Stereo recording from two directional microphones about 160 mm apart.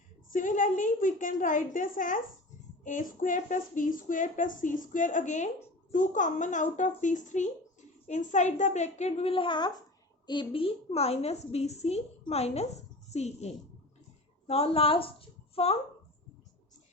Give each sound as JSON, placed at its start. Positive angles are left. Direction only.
{"t": 0.3, "sound": "a woman's voice", "side_deg": 55}